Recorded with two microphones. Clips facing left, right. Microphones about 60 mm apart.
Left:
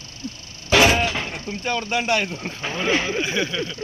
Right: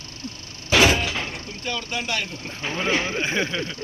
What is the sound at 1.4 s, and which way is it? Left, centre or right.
Speech, left.